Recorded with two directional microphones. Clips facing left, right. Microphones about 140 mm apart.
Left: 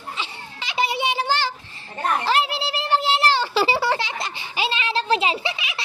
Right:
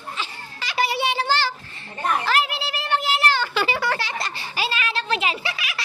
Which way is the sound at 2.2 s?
30° left (ahead or behind).